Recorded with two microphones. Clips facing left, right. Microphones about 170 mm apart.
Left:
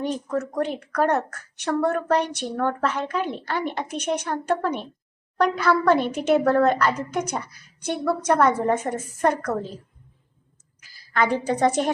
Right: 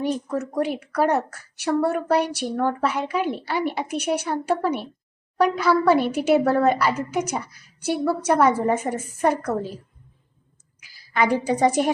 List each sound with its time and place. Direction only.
0.0 s a woman's voice: 10° right (ahead or behind)
10.8 s a woman's voice: 10° right (ahead or behind)